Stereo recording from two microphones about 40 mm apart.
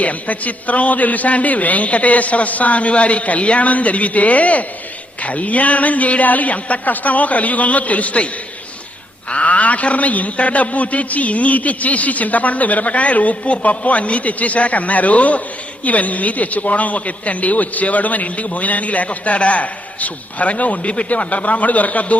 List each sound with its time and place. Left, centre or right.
0.0 s a man's voice: left
9.3 s a man's voice: left